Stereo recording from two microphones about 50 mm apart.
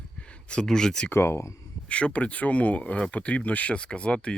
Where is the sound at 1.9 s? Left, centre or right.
Left.